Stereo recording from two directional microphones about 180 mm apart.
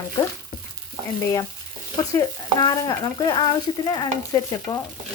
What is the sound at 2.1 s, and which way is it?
Speech, 20° left (ahead or behind).